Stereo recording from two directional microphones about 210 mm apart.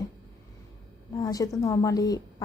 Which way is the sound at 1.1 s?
15° left (ahead or behind).